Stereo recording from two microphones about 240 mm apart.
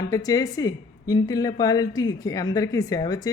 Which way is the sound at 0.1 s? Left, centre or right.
Centre.